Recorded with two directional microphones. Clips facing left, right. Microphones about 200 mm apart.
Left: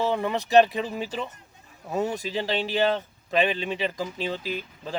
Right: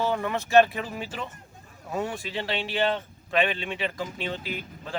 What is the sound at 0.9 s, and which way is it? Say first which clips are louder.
Speech: left 4 dB; 35° left (ahead or behind).